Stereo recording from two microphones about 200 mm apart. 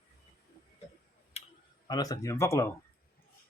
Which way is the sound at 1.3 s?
30° left (ahead or behind).